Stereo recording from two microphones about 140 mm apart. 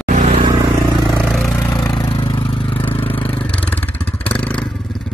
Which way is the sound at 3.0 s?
15° left (ahead or behind).